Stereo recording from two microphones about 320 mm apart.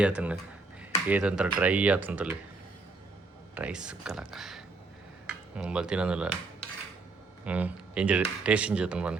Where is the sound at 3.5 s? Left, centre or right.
Centre.